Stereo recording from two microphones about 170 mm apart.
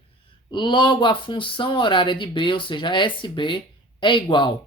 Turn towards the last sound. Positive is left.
turn(degrees=30)  # may be behind; listen again after turning